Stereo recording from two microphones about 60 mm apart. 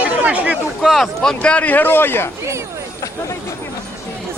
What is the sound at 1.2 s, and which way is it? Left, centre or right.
Speech, centre.